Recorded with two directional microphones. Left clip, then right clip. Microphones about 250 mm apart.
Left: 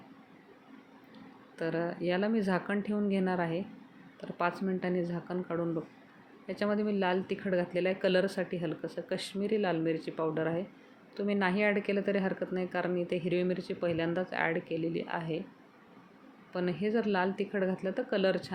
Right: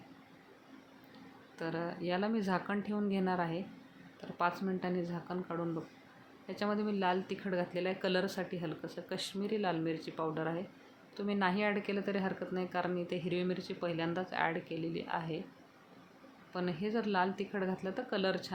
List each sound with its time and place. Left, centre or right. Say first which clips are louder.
1.5 s speech: left 5 dB; centre
16.5 s speech: left 5 dB; centre